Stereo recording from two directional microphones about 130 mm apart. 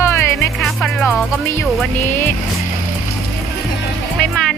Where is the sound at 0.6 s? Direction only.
Centre (ahead or behind).